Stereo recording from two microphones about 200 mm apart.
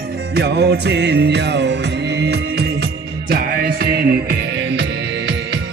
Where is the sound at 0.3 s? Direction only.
55° right (ahead or behind).